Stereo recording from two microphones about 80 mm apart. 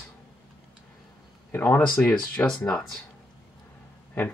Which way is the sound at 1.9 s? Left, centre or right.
Centre.